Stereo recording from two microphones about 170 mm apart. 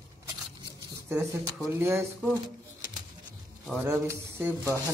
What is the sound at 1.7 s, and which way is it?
Speech, 15° right (ahead or behind).